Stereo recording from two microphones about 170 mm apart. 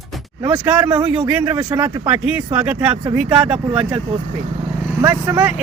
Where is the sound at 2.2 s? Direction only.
10° right (ahead or behind).